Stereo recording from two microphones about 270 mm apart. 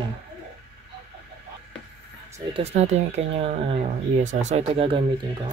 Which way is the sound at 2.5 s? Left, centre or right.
Right.